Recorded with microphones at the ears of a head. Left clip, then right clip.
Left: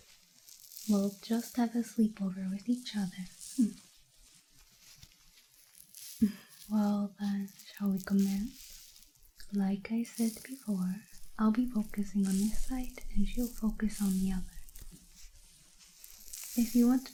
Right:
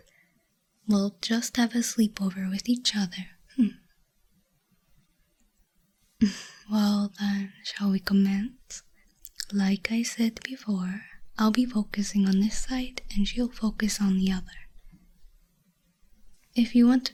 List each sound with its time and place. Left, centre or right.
1.2 s speech: right
6.1 s speech: right
16.1 s sizzle: left
16.6 s speech: right